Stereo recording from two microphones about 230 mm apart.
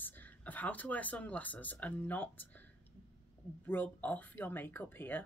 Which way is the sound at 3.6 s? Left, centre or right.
Centre.